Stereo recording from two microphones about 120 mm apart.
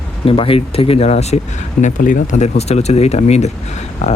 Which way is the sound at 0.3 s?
50° left (ahead or behind).